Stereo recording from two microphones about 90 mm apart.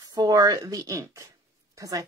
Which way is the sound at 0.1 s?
45° right (ahead or behind).